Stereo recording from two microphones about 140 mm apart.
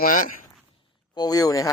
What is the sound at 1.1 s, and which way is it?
Speech, 25° left (ahead or behind).